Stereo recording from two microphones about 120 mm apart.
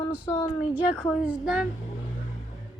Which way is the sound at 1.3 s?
5° right (ahead or behind).